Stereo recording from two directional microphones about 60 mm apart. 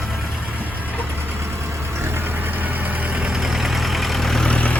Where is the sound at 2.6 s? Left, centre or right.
Right.